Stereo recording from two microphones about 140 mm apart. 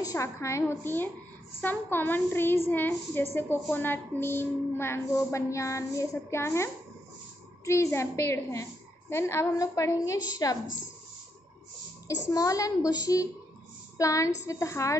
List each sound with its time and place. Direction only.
0.0 s a woman's voice: 20° left (ahead or behind)
12.3 s a woman's voice: 25° left (ahead or behind)